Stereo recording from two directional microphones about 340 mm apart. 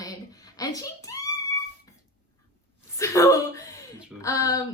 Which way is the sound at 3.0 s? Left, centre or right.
Centre.